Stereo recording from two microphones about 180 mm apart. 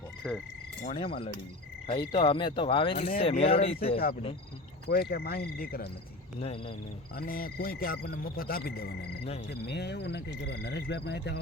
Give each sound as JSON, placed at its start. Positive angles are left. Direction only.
{"t": 0.2, "sound": "frog", "side_deg": -5}
{"t": 0.9, "sound": "speech", "side_deg": 30}
{"t": 4.9, "sound": "speech", "side_deg": 60}
{"t": 6.4, "sound": "speech", "side_deg": 35}
{"t": 7.2, "sound": "speech", "side_deg": 55}
{"t": 9.5, "sound": "cricket", "side_deg": 70}